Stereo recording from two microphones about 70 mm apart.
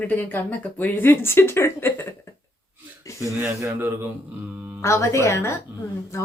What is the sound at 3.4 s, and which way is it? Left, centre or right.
Speech, right.